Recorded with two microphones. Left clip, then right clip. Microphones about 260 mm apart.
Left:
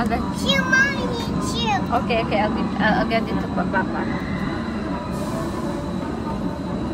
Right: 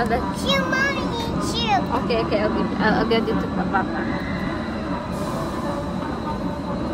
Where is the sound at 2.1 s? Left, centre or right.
Centre.